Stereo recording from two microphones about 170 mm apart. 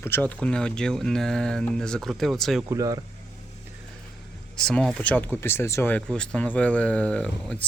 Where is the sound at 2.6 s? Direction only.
20° right (ahead or behind).